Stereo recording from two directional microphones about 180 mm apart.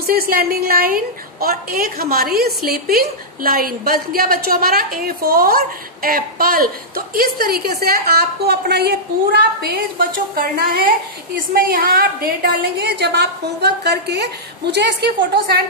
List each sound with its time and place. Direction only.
0.0 s a woman's voice: 55° right (ahead or behind)
12.7 s a woman's voice: 70° right (ahead or behind)